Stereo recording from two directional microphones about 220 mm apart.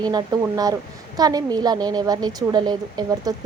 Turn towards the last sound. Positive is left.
turn(degrees=-15)  # may be behind; listen again after turning